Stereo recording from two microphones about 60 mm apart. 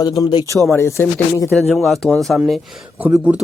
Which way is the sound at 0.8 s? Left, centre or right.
Left.